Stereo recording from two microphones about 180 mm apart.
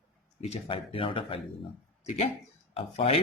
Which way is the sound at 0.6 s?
30° left (ahead or behind).